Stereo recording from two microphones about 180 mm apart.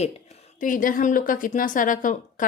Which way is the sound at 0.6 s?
50° left (ahead or behind).